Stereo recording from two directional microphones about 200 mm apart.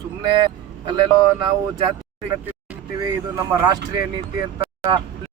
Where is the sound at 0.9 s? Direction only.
20° right (ahead or behind).